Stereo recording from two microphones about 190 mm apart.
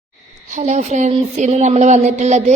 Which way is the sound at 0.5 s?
35° right (ahead or behind).